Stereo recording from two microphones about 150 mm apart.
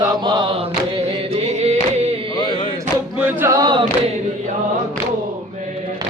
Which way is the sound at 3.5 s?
30° right (ahead or behind).